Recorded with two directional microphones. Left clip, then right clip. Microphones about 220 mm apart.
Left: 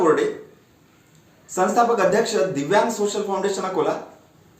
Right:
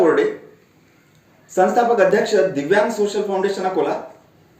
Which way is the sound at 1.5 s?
20° left (ahead or behind).